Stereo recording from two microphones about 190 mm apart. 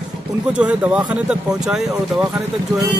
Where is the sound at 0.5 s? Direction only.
5° right (ahead or behind).